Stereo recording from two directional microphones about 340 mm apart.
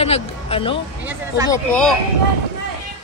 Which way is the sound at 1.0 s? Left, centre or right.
Centre.